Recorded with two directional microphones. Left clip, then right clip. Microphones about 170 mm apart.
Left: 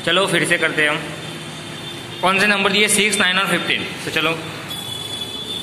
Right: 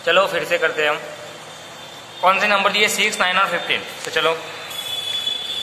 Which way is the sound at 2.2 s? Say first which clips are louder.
Even; 10° right (ahead or behind).